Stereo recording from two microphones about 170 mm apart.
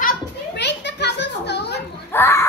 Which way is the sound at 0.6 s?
90° left.